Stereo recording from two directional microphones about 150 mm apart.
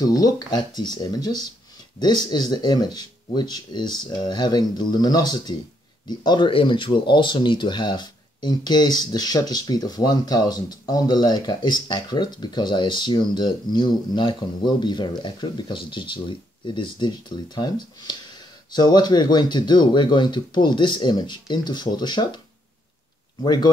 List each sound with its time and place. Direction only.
0.0 s speech: 25° left (ahead or behind)
23.4 s speech: 30° left (ahead or behind)